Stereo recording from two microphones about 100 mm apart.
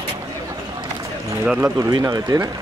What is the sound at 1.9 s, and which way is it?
Speech, 40° right (ahead or behind).